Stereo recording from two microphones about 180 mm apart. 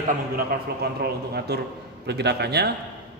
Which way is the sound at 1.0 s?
65° right (ahead or behind).